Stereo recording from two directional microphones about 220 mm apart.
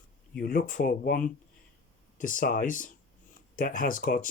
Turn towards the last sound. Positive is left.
turn(degrees=40)  # may be behind; listen again after turning